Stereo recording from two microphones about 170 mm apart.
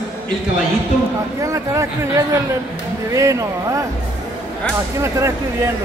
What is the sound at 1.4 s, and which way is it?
Speech, 20° right (ahead or behind).